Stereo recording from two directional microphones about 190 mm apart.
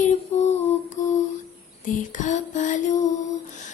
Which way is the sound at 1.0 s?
40° left (ahead or behind).